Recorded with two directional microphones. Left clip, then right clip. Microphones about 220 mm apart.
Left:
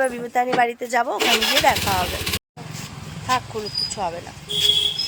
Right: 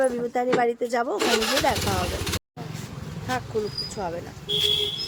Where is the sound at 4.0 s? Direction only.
Centre (ahead or behind).